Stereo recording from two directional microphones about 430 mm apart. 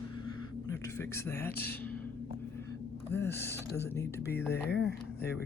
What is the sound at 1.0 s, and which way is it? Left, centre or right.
Speech, centre.